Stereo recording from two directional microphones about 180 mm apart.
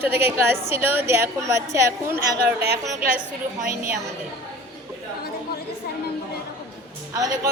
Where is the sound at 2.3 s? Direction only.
60° right (ahead or behind).